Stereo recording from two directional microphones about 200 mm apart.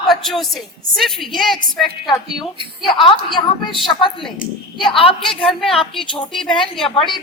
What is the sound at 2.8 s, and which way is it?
Speech, 25° left (ahead or behind).